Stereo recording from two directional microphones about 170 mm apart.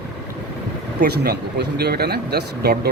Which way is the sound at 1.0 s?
70° right (ahead or behind).